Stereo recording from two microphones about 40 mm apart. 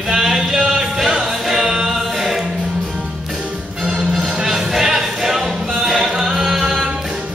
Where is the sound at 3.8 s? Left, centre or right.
Centre.